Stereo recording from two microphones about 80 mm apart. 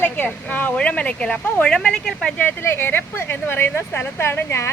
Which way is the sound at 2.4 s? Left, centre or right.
Left.